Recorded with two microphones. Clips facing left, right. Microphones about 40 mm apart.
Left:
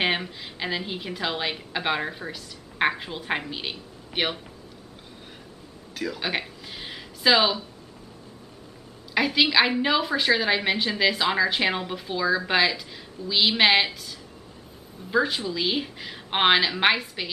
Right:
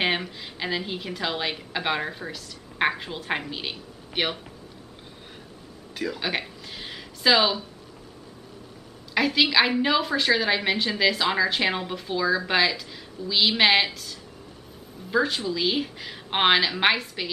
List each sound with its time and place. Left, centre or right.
0.0 s a woman's voice: centre
5.9 s a sound: centre
9.1 s a woman's voice: centre